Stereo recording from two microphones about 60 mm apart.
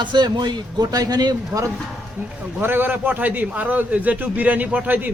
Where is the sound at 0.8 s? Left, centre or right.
Right.